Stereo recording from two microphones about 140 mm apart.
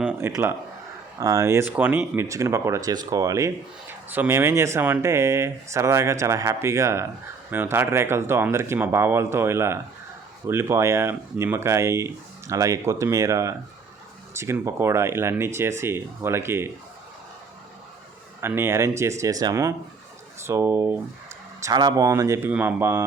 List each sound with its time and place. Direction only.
0.0 s speech: 15° right (ahead or behind)
18.3 s speech: 15° right (ahead or behind)
21.6 s speech: 25° right (ahead or behind)